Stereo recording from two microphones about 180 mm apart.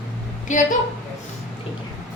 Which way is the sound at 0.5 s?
45° left (ahead or behind).